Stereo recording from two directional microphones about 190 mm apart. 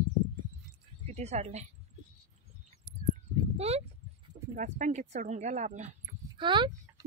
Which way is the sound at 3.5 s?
30° right (ahead or behind).